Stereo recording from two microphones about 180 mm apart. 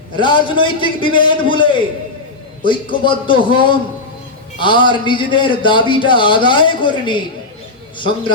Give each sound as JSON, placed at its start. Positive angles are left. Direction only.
{"t": 0.2, "sound": "a man's voice", "side_deg": 25}